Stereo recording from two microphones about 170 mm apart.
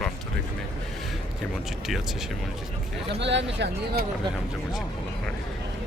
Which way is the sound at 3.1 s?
90° right.